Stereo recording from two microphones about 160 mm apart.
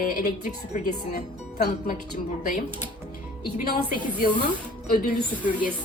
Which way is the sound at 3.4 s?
70° left (ahead or behind).